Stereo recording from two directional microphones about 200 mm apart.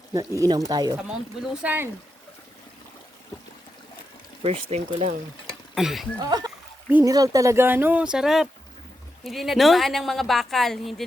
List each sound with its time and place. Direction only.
0.1 s speech: 15° right (ahead or behind)
4.4 s speech: 30° right (ahead or behind)
5.5 s a sound: centre (ahead or behind)
6.2 s a woman's voice: 20° right (ahead or behind); by 11.0 s centre (ahead or behind)